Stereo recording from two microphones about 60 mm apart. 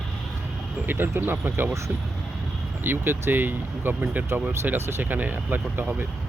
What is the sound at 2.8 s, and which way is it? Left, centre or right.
Speech, right.